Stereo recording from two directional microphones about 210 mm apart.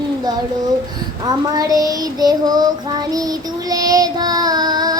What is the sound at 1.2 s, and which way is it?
Child singing, 20° right (ahead or behind).